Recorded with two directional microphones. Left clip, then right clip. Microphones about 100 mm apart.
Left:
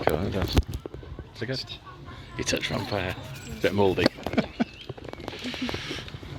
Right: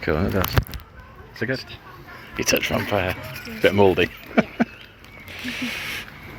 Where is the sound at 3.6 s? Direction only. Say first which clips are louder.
Right 6 dB; 30° left (ahead or behind).